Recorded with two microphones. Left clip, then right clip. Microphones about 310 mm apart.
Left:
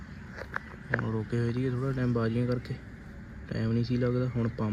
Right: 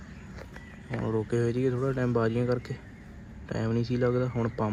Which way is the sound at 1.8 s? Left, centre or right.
Right.